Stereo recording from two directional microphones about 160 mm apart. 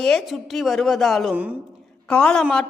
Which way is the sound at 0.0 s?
Centre (ahead or behind).